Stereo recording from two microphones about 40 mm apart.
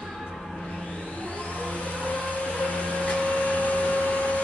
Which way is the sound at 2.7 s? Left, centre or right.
Left.